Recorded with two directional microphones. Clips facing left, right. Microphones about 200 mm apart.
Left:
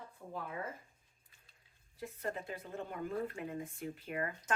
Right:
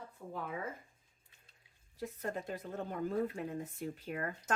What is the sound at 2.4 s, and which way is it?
A woman's voice, 40° right (ahead or behind).